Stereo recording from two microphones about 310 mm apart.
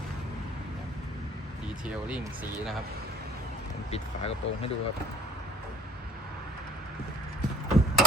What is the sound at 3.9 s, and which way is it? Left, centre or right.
Speech, centre.